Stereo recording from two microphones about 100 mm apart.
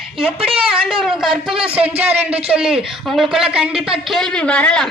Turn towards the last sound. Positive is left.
turn(degrees=10)  # may be behind; listen again after turning